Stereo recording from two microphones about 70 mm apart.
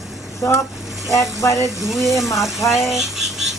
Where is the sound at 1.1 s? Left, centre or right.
Left.